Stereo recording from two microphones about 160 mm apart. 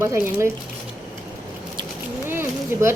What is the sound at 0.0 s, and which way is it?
Speech, 15° right (ahead or behind).